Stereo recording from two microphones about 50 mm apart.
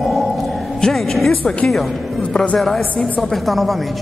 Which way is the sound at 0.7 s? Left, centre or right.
Centre.